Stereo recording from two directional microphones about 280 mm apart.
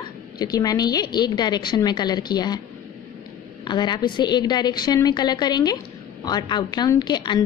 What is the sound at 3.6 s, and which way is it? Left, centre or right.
A woman's voice, centre.